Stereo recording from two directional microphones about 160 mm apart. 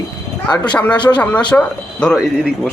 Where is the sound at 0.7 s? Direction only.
10° left (ahead or behind).